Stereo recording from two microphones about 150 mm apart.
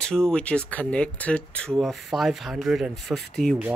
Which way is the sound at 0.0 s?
5° left (ahead or behind).